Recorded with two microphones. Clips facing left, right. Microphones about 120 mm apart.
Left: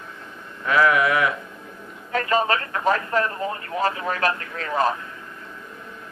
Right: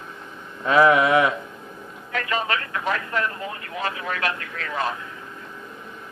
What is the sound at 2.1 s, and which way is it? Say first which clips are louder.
Speech: left 4 dB; 35° left (ahead or behind).